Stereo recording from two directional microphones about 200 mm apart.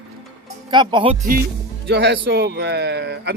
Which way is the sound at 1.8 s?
55° right (ahead or behind).